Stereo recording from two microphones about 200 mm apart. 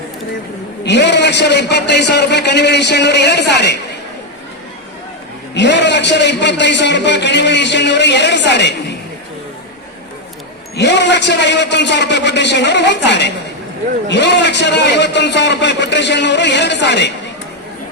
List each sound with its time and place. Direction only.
0.9 s a man's voice: 60° left (ahead or behind)
5.5 s a man's voice: 60° left (ahead or behind)
10.8 s a man's voice: 60° left (ahead or behind)